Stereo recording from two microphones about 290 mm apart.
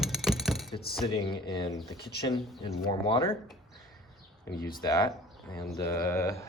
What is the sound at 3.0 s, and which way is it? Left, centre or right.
Speech, centre.